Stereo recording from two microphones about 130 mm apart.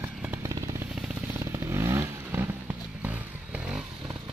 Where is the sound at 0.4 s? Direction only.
25° right (ahead or behind); by 3.8 s 10° right (ahead or behind).